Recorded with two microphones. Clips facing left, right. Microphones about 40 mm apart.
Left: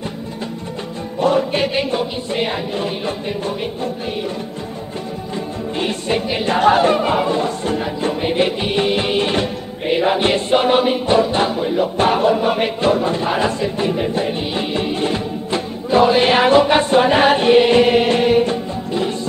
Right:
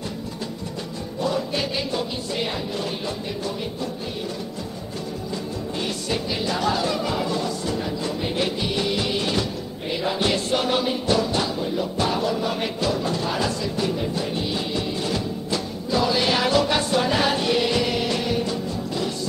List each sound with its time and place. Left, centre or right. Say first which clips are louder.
1.2 s music: left 9 dB; left
5.8 s music: left 8 dB; left